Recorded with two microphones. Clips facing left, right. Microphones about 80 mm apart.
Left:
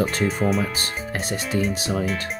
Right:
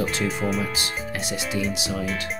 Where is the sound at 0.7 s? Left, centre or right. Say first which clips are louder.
Left 1 dB; left.